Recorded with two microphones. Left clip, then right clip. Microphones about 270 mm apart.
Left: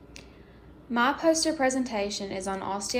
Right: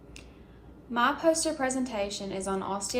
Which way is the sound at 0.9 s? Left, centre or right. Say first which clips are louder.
Left 1 dB; left.